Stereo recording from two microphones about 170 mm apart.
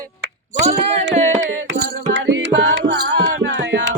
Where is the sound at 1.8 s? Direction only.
90° right.